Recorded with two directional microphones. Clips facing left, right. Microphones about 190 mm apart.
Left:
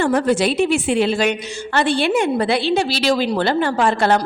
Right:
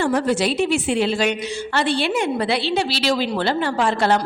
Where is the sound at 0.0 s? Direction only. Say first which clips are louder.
Left 3 dB; 55° left (ahead or behind).